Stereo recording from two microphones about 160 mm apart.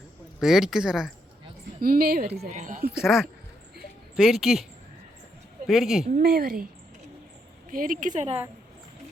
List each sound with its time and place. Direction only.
0.3 s speech: centre (ahead or behind)
1.8 s a woman's voice: 65° right (ahead or behind)
2.5 s a woman's voice: 50° right (ahead or behind)
2.9 s speech: 5° right (ahead or behind)
5.6 s speech: centre (ahead or behind)
6.2 s a woman's voice: 70° right (ahead or behind)
7.7 s a woman's voice: 60° right (ahead or behind)